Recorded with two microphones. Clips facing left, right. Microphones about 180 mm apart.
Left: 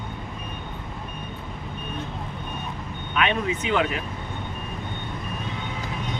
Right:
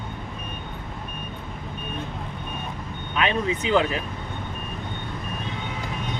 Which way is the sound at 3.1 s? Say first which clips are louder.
Even; 30° right (ahead or behind).